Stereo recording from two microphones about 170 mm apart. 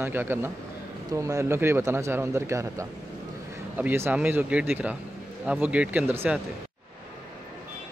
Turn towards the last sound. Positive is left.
turn(degrees=-10)  # may be behind; listen again after turning